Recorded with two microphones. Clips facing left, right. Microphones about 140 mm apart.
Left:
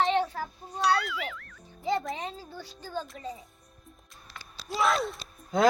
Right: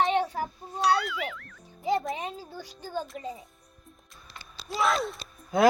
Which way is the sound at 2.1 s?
10° right (ahead or behind).